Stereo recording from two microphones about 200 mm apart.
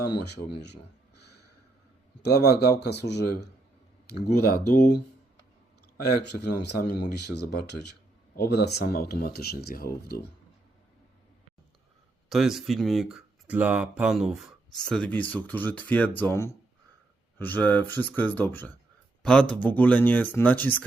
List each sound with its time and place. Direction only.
2.2 s speech: 55° left (ahead or behind)
6.4 s speech: 55° left (ahead or behind)
12.3 s speech: centre (ahead or behind)